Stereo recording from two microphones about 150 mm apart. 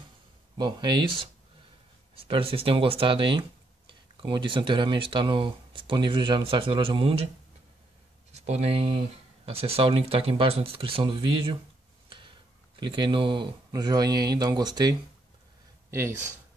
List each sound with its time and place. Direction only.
0.6 s speech: 30° right (ahead or behind)
8.3 s speech: 45° right (ahead or behind)
12.7 s speech: 35° right (ahead or behind)
15.9 s speech: 15° right (ahead or behind)